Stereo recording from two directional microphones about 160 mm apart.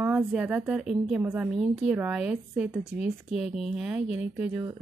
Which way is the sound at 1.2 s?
15° right (ahead or behind).